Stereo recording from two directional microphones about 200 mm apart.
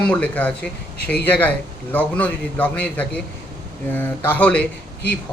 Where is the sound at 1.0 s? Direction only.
55° left (ahead or behind).